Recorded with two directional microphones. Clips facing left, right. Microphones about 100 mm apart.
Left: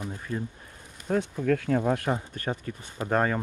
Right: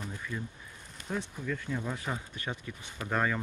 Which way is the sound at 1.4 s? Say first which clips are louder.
Left 11 dB; 75° left (ahead or behind).